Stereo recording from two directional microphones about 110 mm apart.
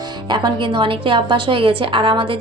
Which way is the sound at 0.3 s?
45° right (ahead or behind).